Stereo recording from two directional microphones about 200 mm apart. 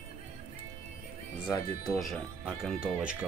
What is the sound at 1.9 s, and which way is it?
Speech, centre (ahead or behind).